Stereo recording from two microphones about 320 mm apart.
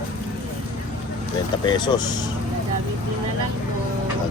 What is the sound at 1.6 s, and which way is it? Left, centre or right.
Speech, centre.